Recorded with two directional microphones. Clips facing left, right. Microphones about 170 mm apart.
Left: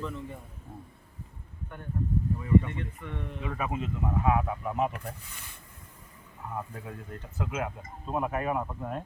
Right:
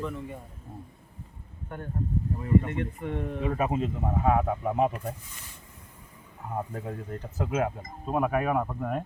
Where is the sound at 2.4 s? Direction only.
45° right (ahead or behind).